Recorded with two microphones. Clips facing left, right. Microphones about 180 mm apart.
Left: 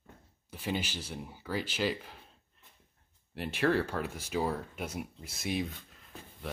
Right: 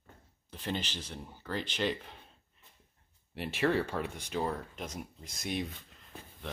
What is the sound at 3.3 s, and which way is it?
Speech, centre (ahead or behind).